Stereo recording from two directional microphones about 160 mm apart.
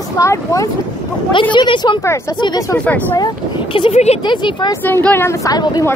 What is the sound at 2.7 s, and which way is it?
Speech, 10° left (ahead or behind).